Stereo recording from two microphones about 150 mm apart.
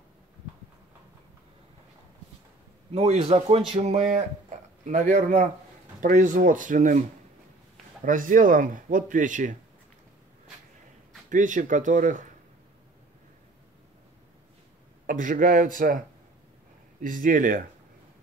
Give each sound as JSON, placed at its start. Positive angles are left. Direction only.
{"t": 2.9, "sound": "speech", "side_deg": -45}
{"t": 11.2, "sound": "speech", "side_deg": -60}
{"t": 15.0, "sound": "speech", "side_deg": -65}
{"t": 17.0, "sound": "speech", "side_deg": -60}